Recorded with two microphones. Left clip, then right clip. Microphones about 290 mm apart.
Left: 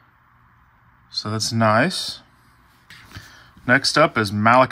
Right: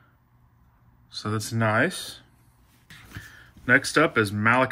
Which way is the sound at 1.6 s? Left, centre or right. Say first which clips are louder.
Left 6 dB; centre.